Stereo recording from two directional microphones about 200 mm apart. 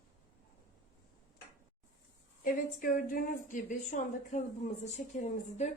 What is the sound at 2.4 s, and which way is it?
A woman's voice, 45° left (ahead or behind).